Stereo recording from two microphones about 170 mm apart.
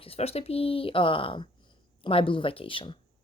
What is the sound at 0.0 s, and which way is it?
Speech, 35° left (ahead or behind).